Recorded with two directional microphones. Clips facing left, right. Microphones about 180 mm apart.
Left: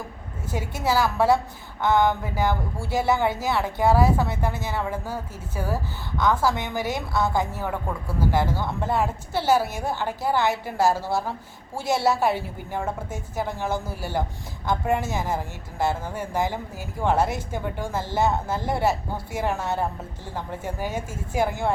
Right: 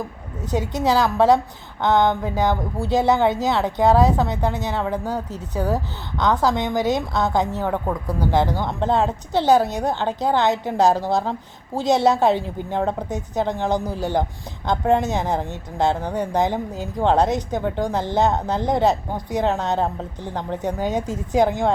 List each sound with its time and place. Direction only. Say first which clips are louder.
0.5 s a woman's voice: right 5 dB; 20° right (ahead or behind)